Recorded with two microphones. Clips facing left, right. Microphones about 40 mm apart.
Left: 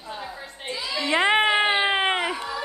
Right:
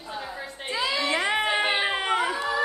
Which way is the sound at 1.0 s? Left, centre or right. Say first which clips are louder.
Left 8 dB; left.